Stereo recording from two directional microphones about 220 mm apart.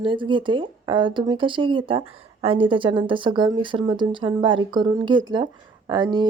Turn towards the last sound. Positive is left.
turn(degrees=-20)  # may be behind; listen again after turning